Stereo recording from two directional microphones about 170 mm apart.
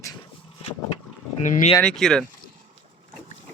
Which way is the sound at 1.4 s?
50° left (ahead or behind).